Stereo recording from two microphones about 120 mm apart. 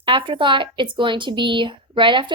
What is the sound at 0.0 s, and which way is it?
A woman's voice, 45° right (ahead or behind).